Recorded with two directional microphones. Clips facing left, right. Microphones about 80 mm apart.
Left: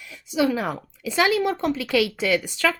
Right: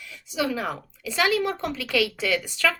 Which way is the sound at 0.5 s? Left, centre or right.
Left.